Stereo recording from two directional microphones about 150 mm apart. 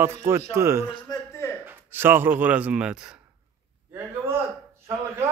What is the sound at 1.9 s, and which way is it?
A man's voice, 15° right (ahead or behind).